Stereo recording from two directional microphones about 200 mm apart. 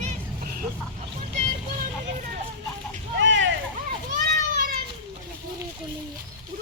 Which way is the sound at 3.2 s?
65° right (ahead or behind).